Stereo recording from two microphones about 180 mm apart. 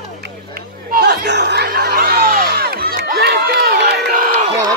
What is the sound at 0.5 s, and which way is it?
Chatter, 55° right (ahead or behind).